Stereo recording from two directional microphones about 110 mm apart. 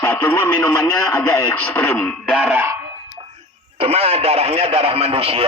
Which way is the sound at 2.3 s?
10° right (ahead or behind).